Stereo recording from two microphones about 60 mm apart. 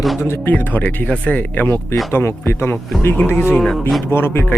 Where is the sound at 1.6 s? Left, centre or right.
Left.